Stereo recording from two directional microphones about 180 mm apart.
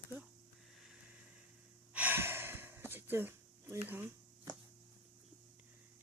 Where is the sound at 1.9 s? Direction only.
10° right (ahead or behind).